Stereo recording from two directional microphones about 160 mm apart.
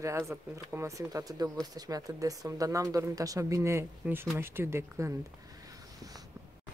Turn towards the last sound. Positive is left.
turn(degrees=-20)  # may be behind; listen again after turning